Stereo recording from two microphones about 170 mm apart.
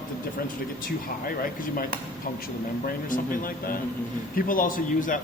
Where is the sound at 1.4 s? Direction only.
60° left (ahead or behind).